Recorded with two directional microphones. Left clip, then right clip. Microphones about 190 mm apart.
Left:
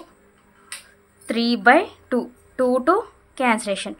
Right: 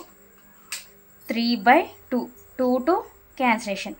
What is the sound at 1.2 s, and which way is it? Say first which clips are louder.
A woman's voice: left 3 dB; 20° left (ahead or behind).